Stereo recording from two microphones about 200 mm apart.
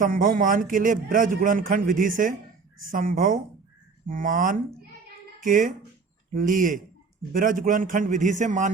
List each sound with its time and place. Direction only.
0.0 s a man's voice: 40° right (ahead or behind)